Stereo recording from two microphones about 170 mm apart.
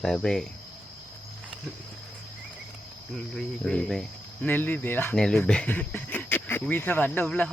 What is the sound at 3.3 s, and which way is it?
Speech, 5° left (ahead or behind).